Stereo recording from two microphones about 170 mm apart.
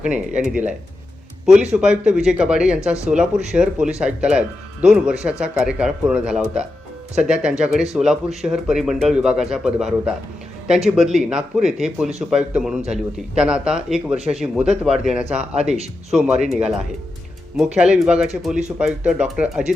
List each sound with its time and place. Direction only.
0.0 s speech: 5° right (ahead or behind)
1.7 s speech: 5° right (ahead or behind)
15.7 s speech: 40° right (ahead or behind)
16.1 s speech: 5° right (ahead or behind)
17.6 s speech: 5° right (ahead or behind)